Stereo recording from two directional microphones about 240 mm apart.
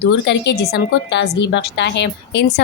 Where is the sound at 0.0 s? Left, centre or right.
Left.